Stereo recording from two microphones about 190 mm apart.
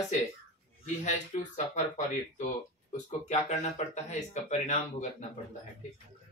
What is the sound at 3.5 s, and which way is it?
Speech, 40° left (ahead or behind).